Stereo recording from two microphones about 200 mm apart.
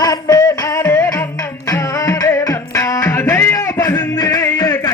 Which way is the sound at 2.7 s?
15° left (ahead or behind).